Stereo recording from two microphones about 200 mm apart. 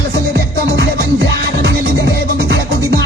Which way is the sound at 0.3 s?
60° right (ahead or behind).